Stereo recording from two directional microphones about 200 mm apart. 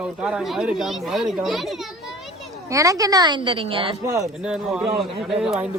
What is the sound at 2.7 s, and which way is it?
A woman's voice, 15° right (ahead or behind).